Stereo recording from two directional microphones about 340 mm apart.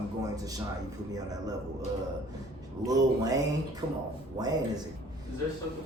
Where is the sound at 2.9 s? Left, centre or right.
Centre.